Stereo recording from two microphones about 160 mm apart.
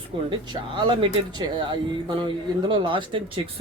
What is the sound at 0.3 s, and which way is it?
Speech, 30° right (ahead or behind).